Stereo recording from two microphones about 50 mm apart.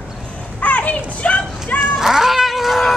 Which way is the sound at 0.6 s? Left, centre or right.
Left.